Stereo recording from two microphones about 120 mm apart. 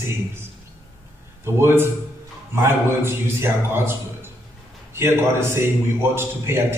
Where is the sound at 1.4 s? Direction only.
20° right (ahead or behind).